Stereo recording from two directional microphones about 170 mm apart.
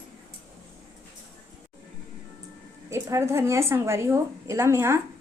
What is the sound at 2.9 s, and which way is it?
A woman's voice, 15° right (ahead or behind).